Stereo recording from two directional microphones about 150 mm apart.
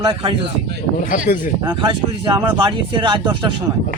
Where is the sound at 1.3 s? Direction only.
90° left.